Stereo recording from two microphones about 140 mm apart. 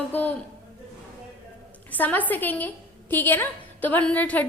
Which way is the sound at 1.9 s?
10° left (ahead or behind).